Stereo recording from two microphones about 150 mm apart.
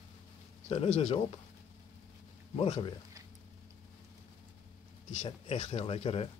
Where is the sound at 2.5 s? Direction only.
40° left (ahead or behind).